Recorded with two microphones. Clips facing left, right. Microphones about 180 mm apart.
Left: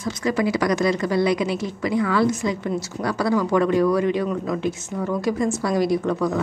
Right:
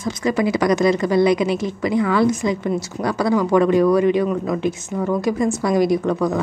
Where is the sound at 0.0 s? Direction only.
20° right (ahead or behind).